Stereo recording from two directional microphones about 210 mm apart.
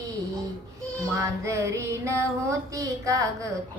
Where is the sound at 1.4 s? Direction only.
15° right (ahead or behind).